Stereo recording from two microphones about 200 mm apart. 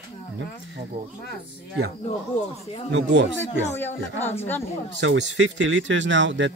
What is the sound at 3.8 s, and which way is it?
Speech, 10° left (ahead or behind).